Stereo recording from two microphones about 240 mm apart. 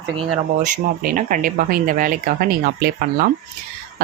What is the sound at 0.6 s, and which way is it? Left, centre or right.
Speech, right.